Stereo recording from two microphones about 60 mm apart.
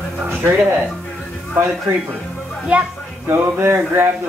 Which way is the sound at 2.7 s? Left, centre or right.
Right.